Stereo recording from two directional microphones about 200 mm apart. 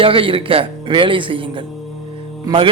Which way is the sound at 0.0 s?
25° right (ahead or behind).